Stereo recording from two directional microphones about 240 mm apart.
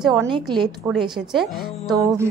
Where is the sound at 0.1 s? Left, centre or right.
Centre.